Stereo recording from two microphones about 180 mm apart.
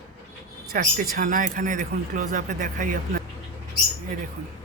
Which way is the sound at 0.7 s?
50° right (ahead or behind).